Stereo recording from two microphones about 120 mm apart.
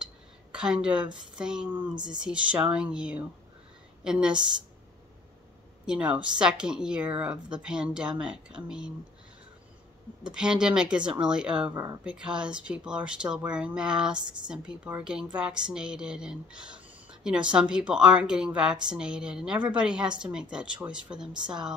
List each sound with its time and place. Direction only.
0.0 s a sound: 5° right (ahead or behind)
1.3 s speech: 5° right (ahead or behind)
5.9 s speech: 10° right (ahead or behind)
10.3 s speech: 5° right (ahead or behind)
11.7 s speech: 30° right (ahead or behind)
12.0 s speech: 10° right (ahead or behind)